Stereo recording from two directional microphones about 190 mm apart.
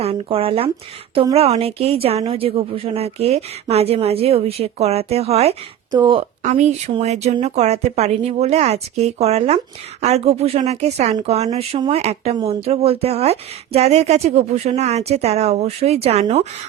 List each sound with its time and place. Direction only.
0.0 s speech: 30° right (ahead or behind)
6.4 s speech: 35° right (ahead or behind)